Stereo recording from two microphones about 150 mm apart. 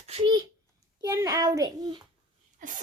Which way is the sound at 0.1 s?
35° right (ahead or behind).